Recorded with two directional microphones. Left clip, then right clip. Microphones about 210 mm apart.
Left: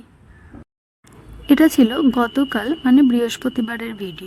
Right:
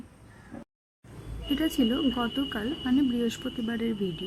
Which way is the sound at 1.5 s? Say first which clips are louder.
Left 13 dB; 45° left (ahead or behind).